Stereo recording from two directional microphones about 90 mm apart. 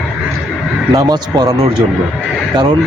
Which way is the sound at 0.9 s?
45° right (ahead or behind).